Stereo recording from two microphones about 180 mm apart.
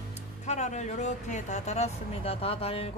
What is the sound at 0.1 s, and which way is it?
Speech, 40° left (ahead or behind).